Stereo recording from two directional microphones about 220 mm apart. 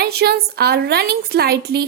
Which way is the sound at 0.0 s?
45° right (ahead or behind).